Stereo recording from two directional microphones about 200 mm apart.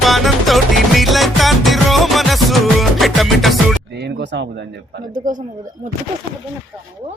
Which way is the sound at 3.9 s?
55° right (ahead or behind).